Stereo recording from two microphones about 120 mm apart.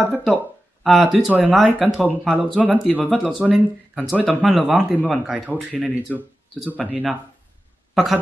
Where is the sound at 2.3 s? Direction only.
15° right (ahead or behind).